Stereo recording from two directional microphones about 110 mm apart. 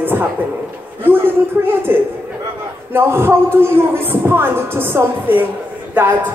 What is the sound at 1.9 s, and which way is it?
Speech, 20° right (ahead or behind).